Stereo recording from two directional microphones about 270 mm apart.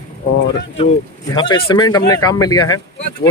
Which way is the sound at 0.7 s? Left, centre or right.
Centre.